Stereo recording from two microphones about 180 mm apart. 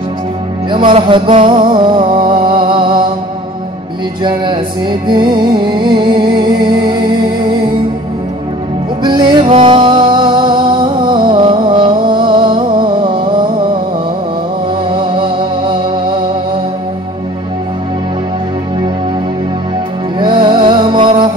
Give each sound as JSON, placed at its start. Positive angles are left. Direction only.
{"t": 0.7, "sound": "music", "side_deg": -25}
{"t": 4.2, "sound": "music", "side_deg": -25}
{"t": 9.0, "sound": "music", "side_deg": -25}
{"t": 14.9, "sound": "music", "side_deg": -25}
{"t": 20.2, "sound": "music", "side_deg": -25}